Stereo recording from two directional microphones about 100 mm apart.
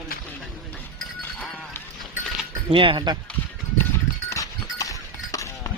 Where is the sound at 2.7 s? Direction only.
60° right (ahead or behind).